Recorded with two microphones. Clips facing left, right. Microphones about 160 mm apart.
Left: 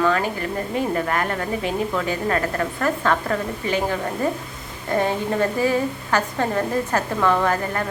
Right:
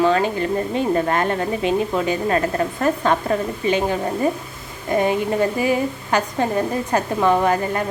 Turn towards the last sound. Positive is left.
turn(degrees=-20)  # may be behind; listen again after turning